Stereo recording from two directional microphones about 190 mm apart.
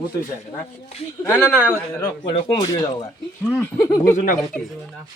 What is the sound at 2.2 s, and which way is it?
Speech, 20° left (ahead or behind).